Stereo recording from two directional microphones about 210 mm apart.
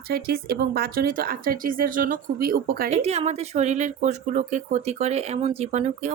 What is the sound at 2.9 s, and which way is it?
Speech, 30° right (ahead or behind).